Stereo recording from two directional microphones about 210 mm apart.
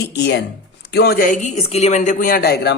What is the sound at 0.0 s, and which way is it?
Speech, 55° left (ahead or behind).